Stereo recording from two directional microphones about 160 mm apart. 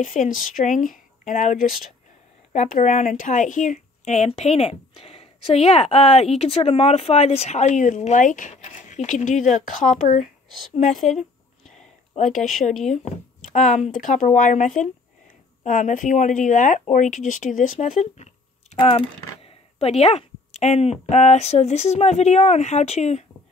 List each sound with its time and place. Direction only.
0.0 s speech: 55° left (ahead or behind)
11.1 s a sound: centre (ahead or behind)
12.2 s speech: 55° left (ahead or behind)
13.9 s speech: 55° left (ahead or behind)